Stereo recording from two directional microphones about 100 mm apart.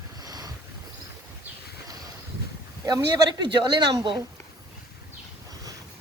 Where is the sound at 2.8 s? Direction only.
45° right (ahead or behind).